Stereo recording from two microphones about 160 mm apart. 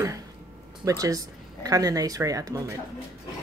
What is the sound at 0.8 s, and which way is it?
Speech, 20° right (ahead or behind).